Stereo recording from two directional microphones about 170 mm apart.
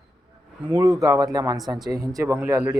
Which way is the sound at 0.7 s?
20° right (ahead or behind).